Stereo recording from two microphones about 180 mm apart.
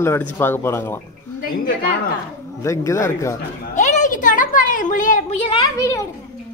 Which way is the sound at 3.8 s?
45° left (ahead or behind).